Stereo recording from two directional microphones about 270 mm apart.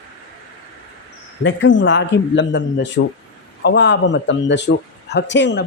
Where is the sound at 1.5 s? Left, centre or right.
Left.